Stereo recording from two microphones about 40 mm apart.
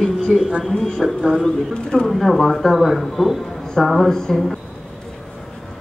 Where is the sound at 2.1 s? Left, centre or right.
Centre.